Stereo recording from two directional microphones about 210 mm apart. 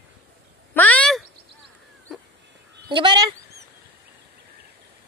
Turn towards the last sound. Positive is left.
turn(degrees=-20)  # may be behind; listen again after turning